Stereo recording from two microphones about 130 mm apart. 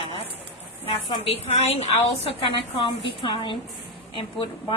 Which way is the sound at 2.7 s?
40° left (ahead or behind).